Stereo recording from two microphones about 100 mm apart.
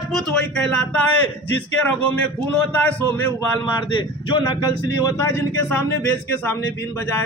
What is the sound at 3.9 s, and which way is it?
Speech, 50° left (ahead or behind).